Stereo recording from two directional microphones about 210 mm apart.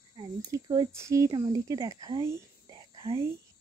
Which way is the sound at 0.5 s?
15° right (ahead or behind).